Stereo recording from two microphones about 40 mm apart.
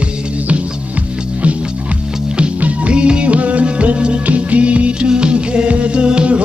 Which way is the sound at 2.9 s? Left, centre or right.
Right.